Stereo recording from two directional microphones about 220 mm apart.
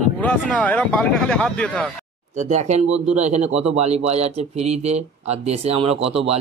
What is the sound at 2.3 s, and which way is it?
Speech, 35° right (ahead or behind).